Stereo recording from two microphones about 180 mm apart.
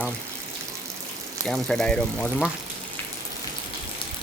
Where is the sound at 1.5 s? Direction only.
5° left (ahead or behind).